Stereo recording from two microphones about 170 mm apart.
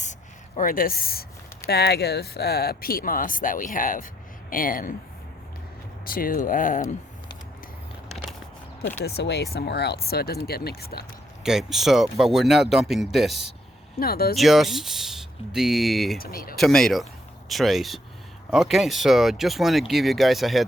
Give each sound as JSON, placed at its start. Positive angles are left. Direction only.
{"t": 0.0, "sound": "a sound", "side_deg": 45}
{"t": 1.6, "sound": "speech", "side_deg": 70}
{"t": 6.1, "sound": "speech", "side_deg": 55}
{"t": 9.0, "sound": "speech", "side_deg": 75}
{"t": 11.4, "sound": "speech", "side_deg": 0}
{"t": 14.0, "sound": "speech", "side_deg": 65}
{"t": 14.3, "sound": "speech", "side_deg": 0}
{"t": 16.1, "sound": "speech", "side_deg": 60}
{"t": 16.6, "sound": "speech", "side_deg": 0}